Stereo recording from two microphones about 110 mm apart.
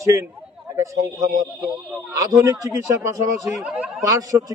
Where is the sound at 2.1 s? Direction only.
30° right (ahead or behind).